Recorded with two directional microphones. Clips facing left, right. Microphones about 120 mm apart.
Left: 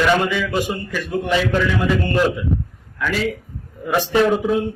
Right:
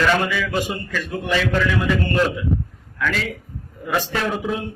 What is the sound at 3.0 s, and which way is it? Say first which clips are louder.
A man's voice: left 3 dB; 15° left (ahead or behind).